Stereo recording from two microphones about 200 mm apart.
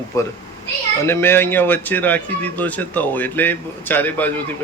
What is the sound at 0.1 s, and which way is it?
A man's voice, 15° left (ahead or behind).